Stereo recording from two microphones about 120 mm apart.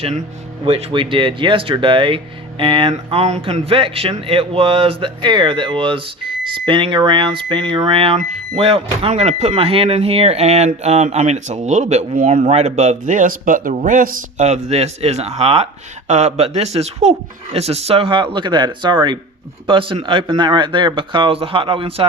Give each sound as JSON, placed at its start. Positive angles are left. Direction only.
{"t": 0.6, "sound": "speech", "side_deg": -50}
{"t": 3.1, "sound": "speech", "side_deg": -60}
{"t": 3.4, "sound": "speech", "side_deg": -50}
{"t": 14.3, "sound": "speech", "side_deg": -70}
{"t": 16.0, "sound": "speech", "side_deg": -70}